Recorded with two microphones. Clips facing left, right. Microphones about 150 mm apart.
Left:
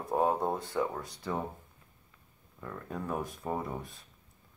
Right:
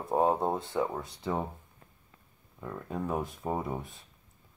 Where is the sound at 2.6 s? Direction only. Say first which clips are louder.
Right 3 dB; 15° right (ahead or behind).